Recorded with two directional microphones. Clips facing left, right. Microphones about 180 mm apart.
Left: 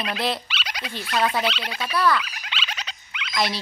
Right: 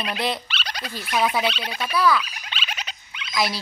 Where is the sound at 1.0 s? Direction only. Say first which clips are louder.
Right 1 dB; 15° right (ahead or behind).